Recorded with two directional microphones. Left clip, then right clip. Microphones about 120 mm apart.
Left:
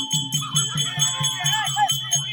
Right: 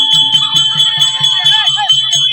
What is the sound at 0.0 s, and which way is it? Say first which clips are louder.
Music: right 17 dB; centre (ahead or behind).